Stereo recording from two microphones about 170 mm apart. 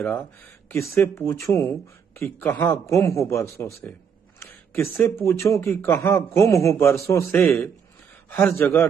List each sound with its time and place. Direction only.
0.0 s speech: 10° left (ahead or behind)